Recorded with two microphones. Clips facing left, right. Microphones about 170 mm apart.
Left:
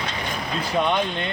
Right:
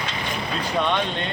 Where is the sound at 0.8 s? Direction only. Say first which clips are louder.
Left 1 dB; 10° left (ahead or behind).